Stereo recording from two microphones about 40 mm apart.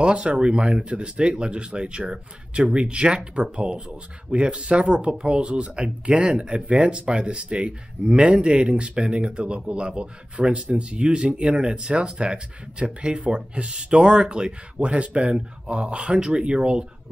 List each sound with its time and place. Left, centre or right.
0.0 s speech: right